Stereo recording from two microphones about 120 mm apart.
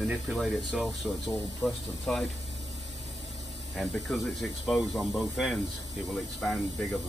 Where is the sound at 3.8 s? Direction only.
Centre (ahead or behind).